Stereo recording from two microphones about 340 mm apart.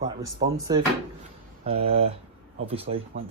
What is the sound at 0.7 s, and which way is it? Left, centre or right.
Speech, centre.